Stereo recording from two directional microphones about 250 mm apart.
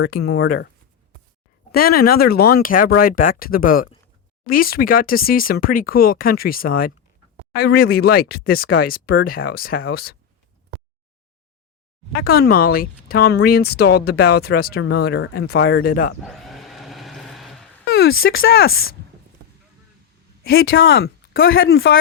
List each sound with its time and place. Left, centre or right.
0.2 s speech: left
1.7 s speech: left
12.2 s speech: left
16.2 s a sound: centre
18.4 s speech: left
18.7 s speech: left
20.6 s speech: left
21.5 s speech: left